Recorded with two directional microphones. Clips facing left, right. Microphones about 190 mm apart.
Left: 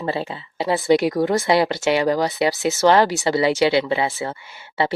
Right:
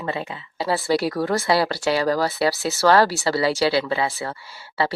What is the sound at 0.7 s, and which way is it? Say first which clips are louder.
Speech: left 4 dB; 20° left (ahead or behind).